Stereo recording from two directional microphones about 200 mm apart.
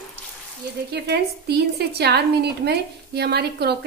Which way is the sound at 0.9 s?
55° right (ahead or behind).